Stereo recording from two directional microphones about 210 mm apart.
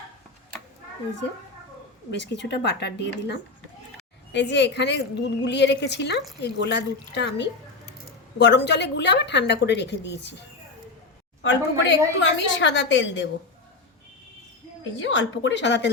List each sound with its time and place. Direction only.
2.0 s a woman's voice: 55° left (ahead or behind)
11.4 s a woman's voice: 60° left (ahead or behind)
14.9 s a woman's voice: 60° left (ahead or behind)